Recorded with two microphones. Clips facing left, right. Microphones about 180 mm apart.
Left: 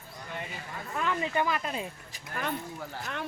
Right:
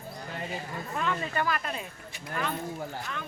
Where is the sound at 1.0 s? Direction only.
15° left (ahead or behind).